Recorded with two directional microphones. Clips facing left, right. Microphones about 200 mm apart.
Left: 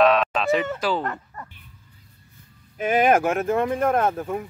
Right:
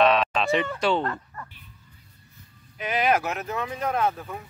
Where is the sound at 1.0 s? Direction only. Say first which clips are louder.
Even; 20° left (ahead or behind).